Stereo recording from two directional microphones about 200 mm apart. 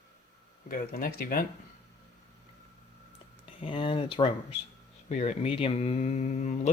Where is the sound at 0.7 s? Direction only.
45° left (ahead or behind).